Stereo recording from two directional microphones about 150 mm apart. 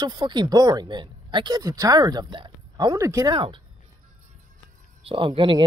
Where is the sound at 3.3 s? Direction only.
35° right (ahead or behind).